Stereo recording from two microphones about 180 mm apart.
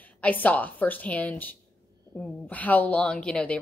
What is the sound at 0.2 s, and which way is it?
Speech, 10° left (ahead or behind).